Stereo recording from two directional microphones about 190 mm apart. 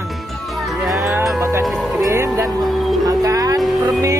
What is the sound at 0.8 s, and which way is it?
Music, centre (ahead or behind).